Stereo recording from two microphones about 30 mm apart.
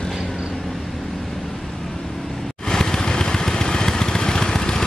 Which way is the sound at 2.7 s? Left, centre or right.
Left.